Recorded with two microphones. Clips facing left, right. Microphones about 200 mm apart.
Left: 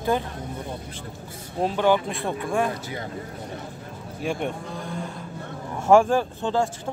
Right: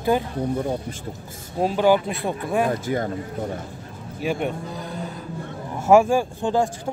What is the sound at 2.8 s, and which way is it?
Speech, 50° right (ahead or behind).